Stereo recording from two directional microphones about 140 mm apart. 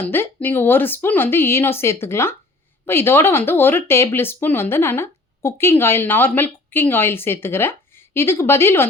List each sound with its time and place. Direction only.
0.0 s speech: 15° left (ahead or behind)